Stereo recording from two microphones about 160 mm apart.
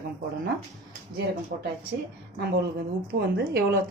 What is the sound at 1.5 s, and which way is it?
Speech, 65° right (ahead or behind).